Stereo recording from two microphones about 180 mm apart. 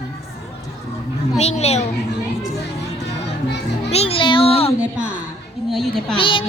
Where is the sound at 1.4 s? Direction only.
35° left (ahead or behind).